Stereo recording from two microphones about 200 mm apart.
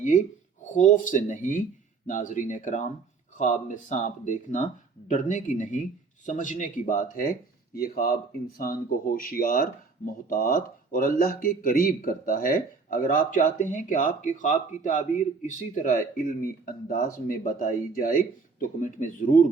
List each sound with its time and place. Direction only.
0.6 s speech: 40° left (ahead or behind)